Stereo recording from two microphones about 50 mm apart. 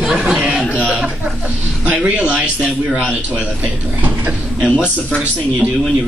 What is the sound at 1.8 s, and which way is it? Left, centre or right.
Speech, right.